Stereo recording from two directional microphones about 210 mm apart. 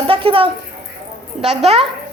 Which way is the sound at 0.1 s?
25° right (ahead or behind).